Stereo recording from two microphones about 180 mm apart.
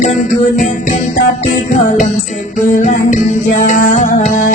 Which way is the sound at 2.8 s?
45° left (ahead or behind).